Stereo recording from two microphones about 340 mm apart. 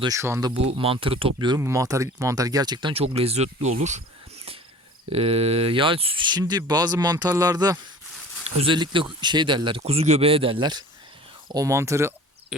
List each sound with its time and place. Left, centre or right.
0.0 s speech: centre
5.1 s speech: centre